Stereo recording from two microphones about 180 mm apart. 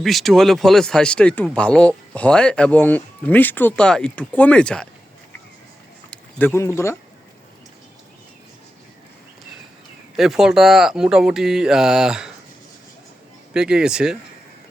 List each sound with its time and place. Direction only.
0.0 s speech: centre (ahead or behind)
6.1 s speech: 10° left (ahead or behind)
10.2 s speech: centre (ahead or behind)
13.5 s speech: 5° right (ahead or behind)